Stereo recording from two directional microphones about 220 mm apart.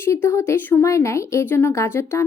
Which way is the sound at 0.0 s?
10° left (ahead or behind).